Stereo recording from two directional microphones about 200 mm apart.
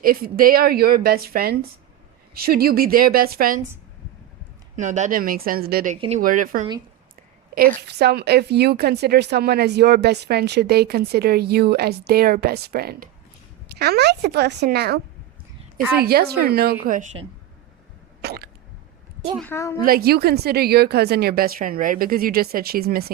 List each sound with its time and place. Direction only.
0.0 s a woman's voice: 45° right (ahead or behind)
4.8 s a woman's voice: 40° right (ahead or behind)
16.8 s speech: 40° right (ahead or behind)
18.2 s hiccup: 55° right (ahead or behind)
19.4 s a woman's voice: 10° left (ahead or behind)
19.8 s a woman's voice: 50° right (ahead or behind)